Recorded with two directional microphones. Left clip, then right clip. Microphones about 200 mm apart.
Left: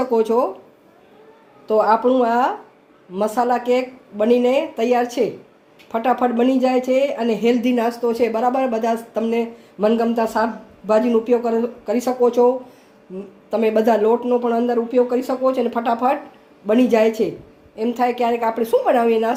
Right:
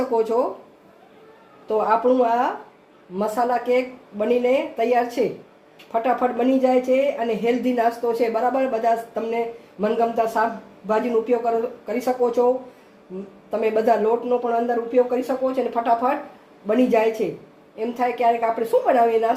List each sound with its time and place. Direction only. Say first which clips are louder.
0.1 s speech: left 3 dB; 45° left (ahead or behind)
1.6 s speech: left 3 dB; 45° left (ahead or behind)
13.5 s speech: left 3 dB; 45° left (ahead or behind)